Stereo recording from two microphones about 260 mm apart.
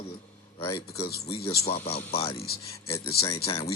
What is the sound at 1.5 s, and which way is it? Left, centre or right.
Speech, left.